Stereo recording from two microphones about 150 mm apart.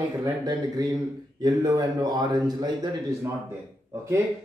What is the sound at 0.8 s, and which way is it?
A man's voice, 25° right (ahead or behind).